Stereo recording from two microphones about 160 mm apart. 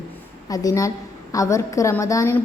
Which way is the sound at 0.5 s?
20° left (ahead or behind).